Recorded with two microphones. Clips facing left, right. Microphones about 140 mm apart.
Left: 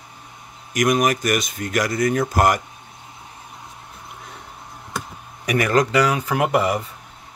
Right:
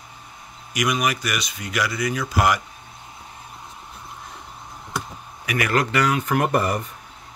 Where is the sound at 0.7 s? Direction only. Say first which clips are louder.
Left 5 dB; 45° left (ahead or behind).